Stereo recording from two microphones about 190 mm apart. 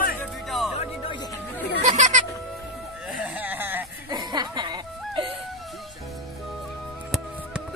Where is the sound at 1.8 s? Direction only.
40° right (ahead or behind).